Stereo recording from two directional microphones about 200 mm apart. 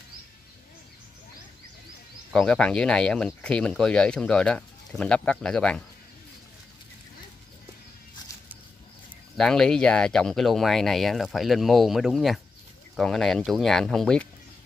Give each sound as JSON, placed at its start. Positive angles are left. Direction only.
{"t": 2.3, "sound": "speech", "side_deg": 5}
{"t": 9.4, "sound": "speech", "side_deg": 5}